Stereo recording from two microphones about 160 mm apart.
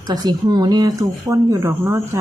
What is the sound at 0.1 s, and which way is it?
Speech, 25° right (ahead or behind).